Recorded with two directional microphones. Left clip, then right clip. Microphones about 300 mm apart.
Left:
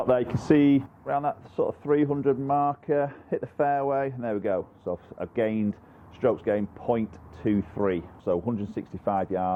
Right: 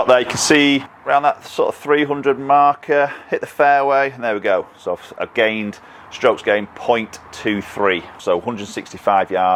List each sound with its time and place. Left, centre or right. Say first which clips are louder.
0.0 s speech: right 11 dB; centre